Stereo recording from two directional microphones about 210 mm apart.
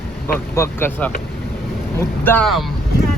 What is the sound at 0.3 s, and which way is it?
Speech, 10° left (ahead or behind).